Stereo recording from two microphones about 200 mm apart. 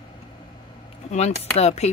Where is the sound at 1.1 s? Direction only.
35° left (ahead or behind).